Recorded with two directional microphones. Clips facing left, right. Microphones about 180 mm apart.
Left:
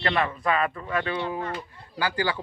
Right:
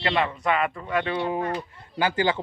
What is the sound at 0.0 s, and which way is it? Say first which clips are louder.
A man's voice: right 1 dB; 25° right (ahead or behind).